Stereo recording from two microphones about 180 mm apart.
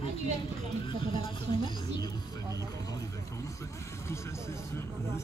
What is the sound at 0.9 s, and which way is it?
Speech, 30° left (ahead or behind).